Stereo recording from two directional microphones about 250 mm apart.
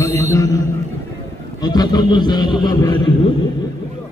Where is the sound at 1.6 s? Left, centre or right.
Centre.